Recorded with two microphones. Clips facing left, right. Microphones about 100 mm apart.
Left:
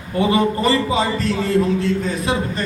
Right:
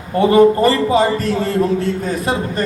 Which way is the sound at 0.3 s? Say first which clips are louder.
Right 7 dB; 45° right (ahead or behind).